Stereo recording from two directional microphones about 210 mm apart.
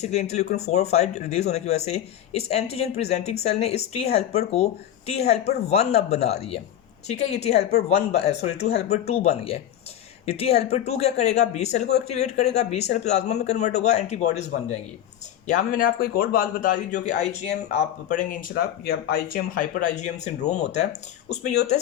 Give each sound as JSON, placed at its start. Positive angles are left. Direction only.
{"t": 0.0, "sound": "speech", "side_deg": 30}